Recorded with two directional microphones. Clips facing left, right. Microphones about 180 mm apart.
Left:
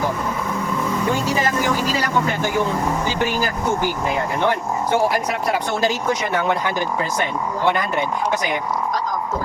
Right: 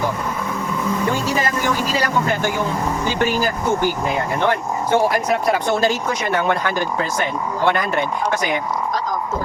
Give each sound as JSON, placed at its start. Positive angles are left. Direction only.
{"t": 4.4, "sound": "speech", "side_deg": 10}